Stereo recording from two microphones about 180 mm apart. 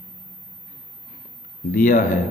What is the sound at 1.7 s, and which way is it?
Speech, 45° left (ahead or behind).